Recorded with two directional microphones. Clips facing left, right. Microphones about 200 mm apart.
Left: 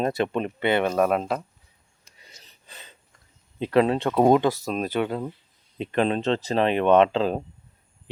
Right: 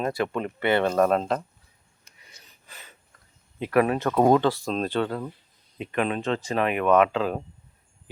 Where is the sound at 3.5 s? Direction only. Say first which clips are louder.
Left 2 dB; 25° left (ahead or behind); by 5.1 s 10° left (ahead or behind).